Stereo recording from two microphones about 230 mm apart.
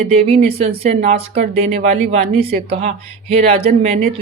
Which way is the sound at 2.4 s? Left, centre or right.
Right.